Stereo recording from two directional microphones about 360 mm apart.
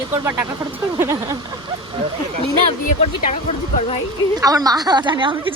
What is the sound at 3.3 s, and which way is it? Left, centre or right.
Speech, centre.